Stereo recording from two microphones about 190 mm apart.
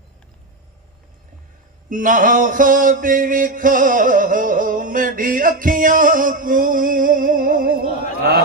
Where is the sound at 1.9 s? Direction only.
45° right (ahead or behind).